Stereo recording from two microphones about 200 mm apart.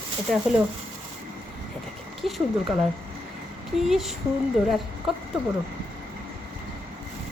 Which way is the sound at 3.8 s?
Centre (ahead or behind).